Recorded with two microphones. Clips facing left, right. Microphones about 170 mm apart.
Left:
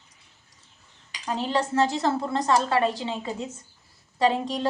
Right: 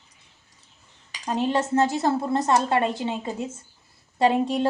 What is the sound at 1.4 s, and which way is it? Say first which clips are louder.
Speech: right 3 dB; 20° right (ahead or behind).